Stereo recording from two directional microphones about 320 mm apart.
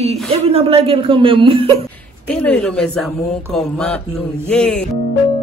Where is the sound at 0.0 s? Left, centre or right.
Centre.